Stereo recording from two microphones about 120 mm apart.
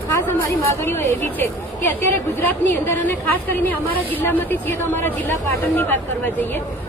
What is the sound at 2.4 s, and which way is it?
A woman's voice, 15° left (ahead or behind).